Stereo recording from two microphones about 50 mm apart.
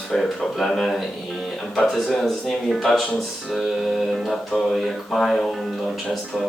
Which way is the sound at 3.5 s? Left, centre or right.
Centre.